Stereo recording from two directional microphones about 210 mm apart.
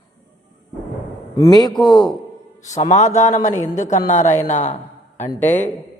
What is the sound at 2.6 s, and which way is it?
A man's voice, 35° left (ahead or behind).